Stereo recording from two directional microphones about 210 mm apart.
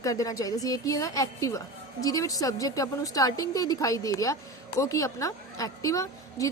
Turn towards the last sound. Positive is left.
turn(degrees=15)  # may be behind; listen again after turning